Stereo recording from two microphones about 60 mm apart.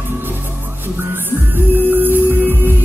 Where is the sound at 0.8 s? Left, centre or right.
Right.